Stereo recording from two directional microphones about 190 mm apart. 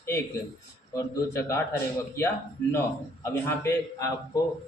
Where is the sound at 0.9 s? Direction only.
15° left (ahead or behind).